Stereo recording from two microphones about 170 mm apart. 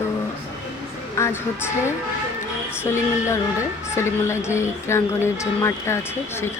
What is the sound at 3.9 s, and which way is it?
A woman's voice, 15° left (ahead or behind).